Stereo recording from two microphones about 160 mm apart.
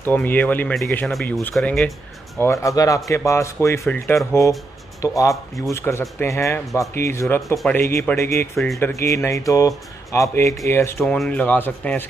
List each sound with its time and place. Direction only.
0.0 s a man's voice: 10° left (ahead or behind)
2.3 s speech: 20° left (ahead or behind)
7.4 s a man's voice: centre (ahead or behind)
8.2 s speech: 20° left (ahead or behind)